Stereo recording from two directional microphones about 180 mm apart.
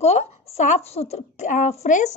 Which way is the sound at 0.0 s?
35° left (ahead or behind).